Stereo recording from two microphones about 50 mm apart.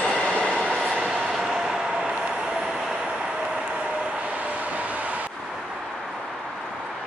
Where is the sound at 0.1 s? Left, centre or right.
Left.